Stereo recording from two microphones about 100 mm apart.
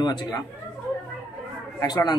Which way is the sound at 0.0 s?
45° left (ahead or behind).